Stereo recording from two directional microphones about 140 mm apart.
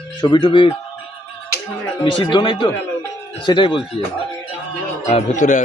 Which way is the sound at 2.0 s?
35° left (ahead or behind).